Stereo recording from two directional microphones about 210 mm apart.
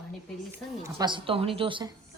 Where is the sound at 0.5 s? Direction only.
20° right (ahead or behind).